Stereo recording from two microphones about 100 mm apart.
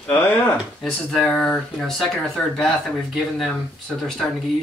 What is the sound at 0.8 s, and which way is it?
Speech, 5° left (ahead or behind).